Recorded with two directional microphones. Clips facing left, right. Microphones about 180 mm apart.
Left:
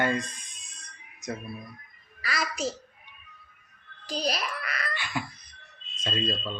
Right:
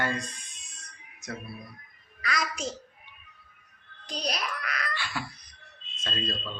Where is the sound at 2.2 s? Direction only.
5° left (ahead or behind).